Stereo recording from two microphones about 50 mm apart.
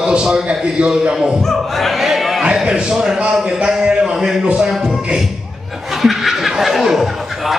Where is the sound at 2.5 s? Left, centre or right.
Centre.